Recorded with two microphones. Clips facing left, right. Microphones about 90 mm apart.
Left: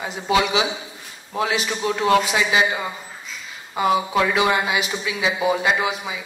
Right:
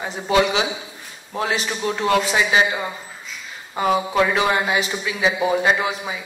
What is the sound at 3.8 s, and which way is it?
A man's voice, 40° right (ahead or behind).